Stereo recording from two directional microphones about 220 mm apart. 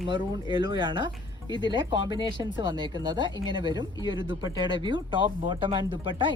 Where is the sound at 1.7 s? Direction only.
20° right (ahead or behind).